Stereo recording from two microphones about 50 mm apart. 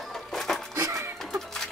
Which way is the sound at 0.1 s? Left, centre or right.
Centre.